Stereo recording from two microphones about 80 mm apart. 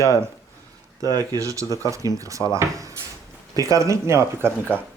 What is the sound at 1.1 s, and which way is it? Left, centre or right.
Speech, right.